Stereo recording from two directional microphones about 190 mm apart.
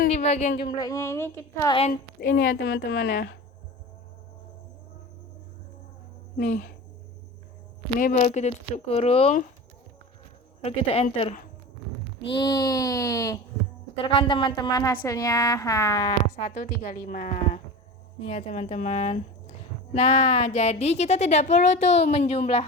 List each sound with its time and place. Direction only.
0.1 s a sound: 35° left (ahead or behind)
0.7 s a woman's voice: 20° left (ahead or behind)
2.6 s speech: 65° left (ahead or behind)
6.4 s a woman's voice: 40° left (ahead or behind)
7.9 s a woman's voice: 45° left (ahead or behind)
10.6 s a woman's voice: 30° left (ahead or behind)
16.3 s a woman's voice: 55° left (ahead or behind); by 22.6 s 30° left (ahead or behind)